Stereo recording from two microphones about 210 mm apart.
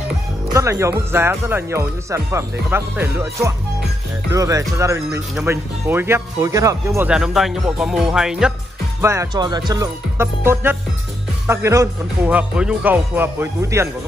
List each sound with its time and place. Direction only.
0.5 s speech: 15° right (ahead or behind)
7.1 s speech: centre (ahead or behind)
9.0 s speech: 15° right (ahead or behind)